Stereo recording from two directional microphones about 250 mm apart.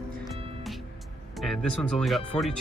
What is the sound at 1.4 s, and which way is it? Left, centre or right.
Speech, centre.